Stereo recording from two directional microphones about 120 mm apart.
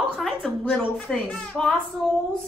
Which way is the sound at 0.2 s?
5° left (ahead or behind).